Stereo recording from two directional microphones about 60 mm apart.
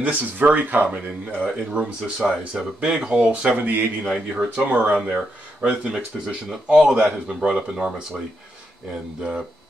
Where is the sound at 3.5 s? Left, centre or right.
Right.